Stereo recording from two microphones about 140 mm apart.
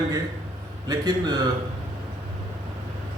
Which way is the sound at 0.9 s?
30° right (ahead or behind).